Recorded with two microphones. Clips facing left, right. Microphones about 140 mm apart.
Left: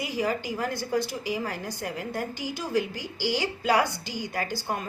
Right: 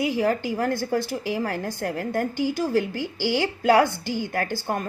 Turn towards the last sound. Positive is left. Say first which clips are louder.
# right 4 dB
turn(degrees=-55)  # may be behind; listen again after turning